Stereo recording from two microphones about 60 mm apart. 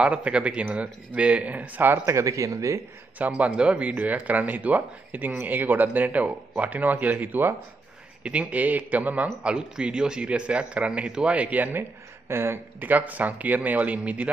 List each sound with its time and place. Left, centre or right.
0.0 s a man's voice: centre
2.0 s speech: right
3.2 s a man's voice: right
12.3 s speech: right
12.8 s a man's voice: right